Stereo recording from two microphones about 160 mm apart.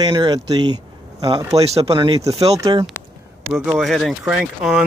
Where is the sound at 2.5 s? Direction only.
20° right (ahead or behind).